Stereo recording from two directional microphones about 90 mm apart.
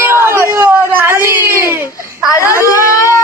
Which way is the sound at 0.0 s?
30° right (ahead or behind).